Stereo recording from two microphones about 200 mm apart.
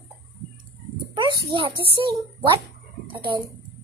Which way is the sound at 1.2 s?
25° right (ahead or behind).